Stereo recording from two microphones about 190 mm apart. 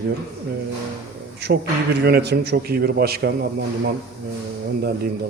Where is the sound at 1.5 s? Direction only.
65° right (ahead or behind).